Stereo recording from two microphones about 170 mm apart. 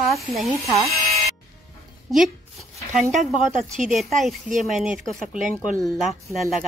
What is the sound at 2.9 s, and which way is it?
Speech, 50° right (ahead or behind).